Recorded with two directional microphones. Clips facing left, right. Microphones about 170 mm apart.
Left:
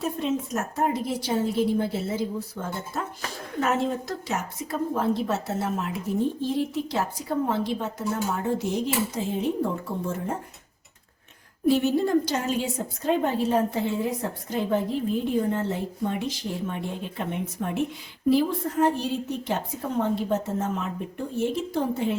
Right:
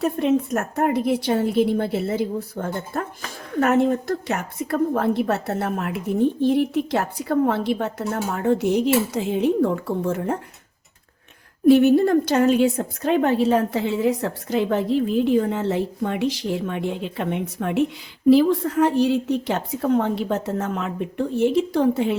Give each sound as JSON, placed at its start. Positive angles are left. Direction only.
{"t": 0.0, "sound": "a woman's voice", "side_deg": -60}
{"t": 11.7, "sound": "a woman's voice", "side_deg": -60}